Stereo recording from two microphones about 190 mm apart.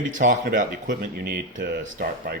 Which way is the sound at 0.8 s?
55° right (ahead or behind).